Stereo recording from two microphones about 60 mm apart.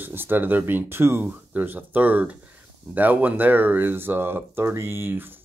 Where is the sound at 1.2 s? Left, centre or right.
Right.